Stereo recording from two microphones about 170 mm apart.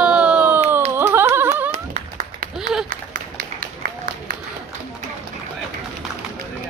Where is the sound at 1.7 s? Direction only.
50° right (ahead or behind).